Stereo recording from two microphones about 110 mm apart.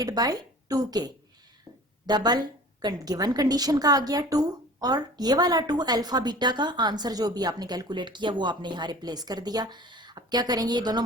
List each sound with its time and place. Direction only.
0.0 s a woman's voice: 35° right (ahead or behind)